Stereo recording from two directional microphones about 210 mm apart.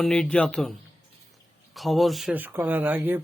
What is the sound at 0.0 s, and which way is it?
Speech, 5° left (ahead or behind).